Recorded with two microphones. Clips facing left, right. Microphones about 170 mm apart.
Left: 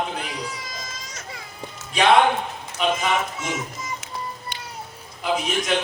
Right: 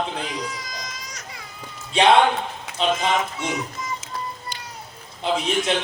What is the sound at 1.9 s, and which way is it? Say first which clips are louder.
Speech: right 1 dB; 25° right (ahead or behind).